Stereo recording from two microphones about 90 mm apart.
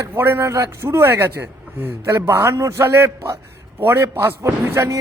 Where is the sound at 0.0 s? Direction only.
25° right (ahead or behind).